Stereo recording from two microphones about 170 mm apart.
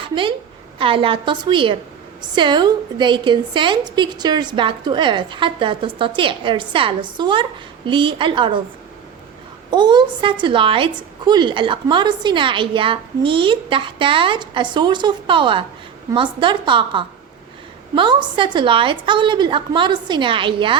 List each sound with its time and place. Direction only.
0.0 s a woman's voice: 30° right (ahead or behind)
9.6 s a woman's voice: 25° right (ahead or behind)